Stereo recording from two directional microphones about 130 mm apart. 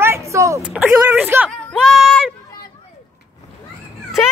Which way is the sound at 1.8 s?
Centre (ahead or behind).